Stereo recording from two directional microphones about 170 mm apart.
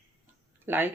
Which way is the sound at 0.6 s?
10° right (ahead or behind).